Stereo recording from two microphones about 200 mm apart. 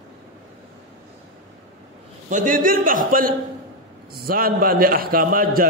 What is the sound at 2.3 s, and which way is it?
A man's voice, 45° right (ahead or behind).